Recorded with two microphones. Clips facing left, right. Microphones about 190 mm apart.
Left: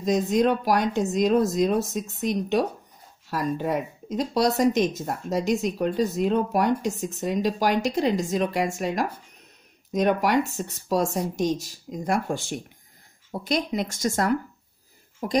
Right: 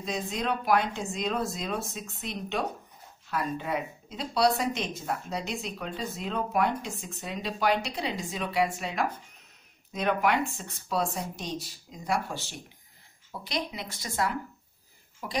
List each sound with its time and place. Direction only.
0.0 s speech: 45° left (ahead or behind)